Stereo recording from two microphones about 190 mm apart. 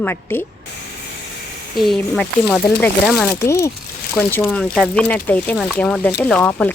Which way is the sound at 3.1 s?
15° left (ahead or behind).